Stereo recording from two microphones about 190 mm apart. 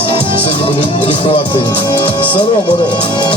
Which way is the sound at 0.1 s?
25° left (ahead or behind).